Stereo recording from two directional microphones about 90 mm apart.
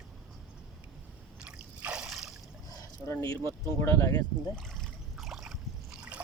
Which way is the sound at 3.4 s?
30° left (ahead or behind).